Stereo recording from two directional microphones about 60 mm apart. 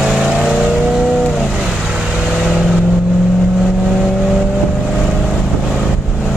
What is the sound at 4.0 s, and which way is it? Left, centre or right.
Vehicle, centre.